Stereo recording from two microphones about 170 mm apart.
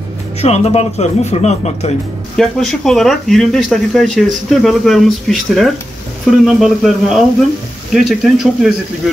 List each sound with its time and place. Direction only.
0.4 s speech: 40° left (ahead or behind)
2.3 s speech: 5° left (ahead or behind)